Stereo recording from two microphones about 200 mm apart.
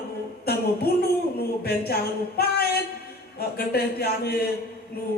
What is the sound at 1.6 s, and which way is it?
A man's voice, 50° left (ahead or behind).